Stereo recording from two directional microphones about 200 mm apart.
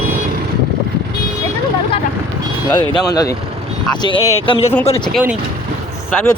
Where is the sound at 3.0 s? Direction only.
20° left (ahead or behind).